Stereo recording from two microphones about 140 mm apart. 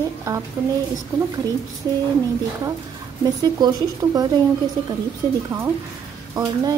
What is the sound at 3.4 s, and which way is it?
Speech, 30° right (ahead or behind).